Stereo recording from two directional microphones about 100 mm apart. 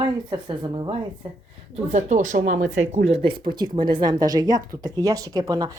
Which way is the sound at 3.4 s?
45° right (ahead or behind).